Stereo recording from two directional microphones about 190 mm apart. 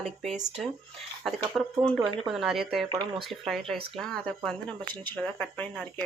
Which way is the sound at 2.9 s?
25° right (ahead or behind).